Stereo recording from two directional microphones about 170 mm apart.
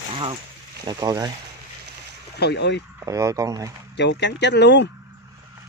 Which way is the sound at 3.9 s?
90° left.